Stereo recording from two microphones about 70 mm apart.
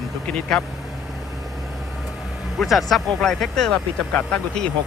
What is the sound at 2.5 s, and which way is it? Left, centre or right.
Speech, centre.